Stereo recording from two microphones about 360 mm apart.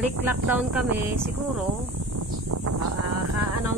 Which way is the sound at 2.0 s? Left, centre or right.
Right.